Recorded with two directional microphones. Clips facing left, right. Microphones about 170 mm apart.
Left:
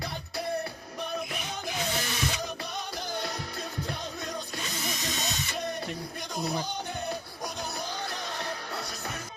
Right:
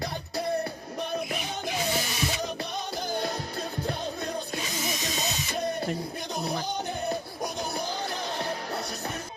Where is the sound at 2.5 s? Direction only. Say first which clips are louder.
Right 3 dB; 25° right (ahead or behind).